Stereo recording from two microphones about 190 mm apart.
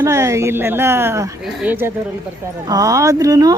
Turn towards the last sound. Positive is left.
turn(degrees=-20)  # may be behind; listen again after turning